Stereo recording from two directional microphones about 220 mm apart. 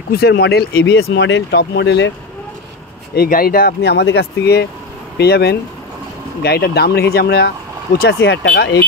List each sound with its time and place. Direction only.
0.1 s speech: 45° left (ahead or behind)
3.2 s speech: 40° left (ahead or behind)